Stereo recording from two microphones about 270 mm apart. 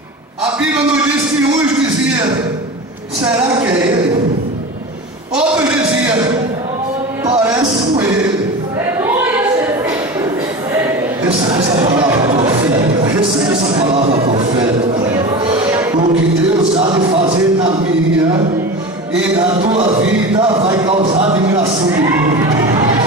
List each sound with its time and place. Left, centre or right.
5.3 s a sound: centre
7.3 s a sound: centre
11.4 s music: centre
13.7 s speech: right
15.6 s music: centre
16.7 s music: centre
19.6 s speech: right